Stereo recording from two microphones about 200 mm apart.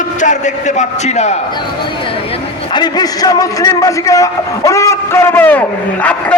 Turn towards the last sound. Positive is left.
turn(degrees=10)  # may be behind; listen again after turning